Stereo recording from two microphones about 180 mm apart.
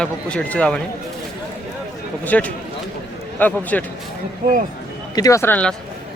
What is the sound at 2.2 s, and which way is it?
Speech, 10° left (ahead or behind).